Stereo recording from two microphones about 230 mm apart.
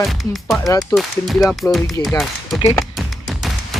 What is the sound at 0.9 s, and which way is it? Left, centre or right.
Speech, centre.